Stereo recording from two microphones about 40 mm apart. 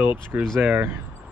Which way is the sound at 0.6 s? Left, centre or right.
Right.